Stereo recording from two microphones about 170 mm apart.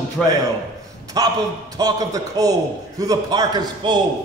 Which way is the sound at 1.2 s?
25° right (ahead or behind).